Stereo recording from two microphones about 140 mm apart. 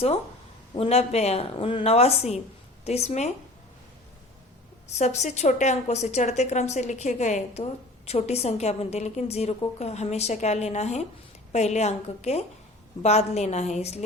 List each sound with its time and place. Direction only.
0.8 s a woman's voice: 50° left (ahead or behind)
4.9 s a woman's voice: 55° left (ahead or behind)